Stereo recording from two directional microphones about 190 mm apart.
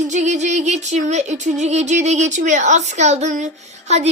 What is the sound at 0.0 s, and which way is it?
Music, 40° right (ahead or behind).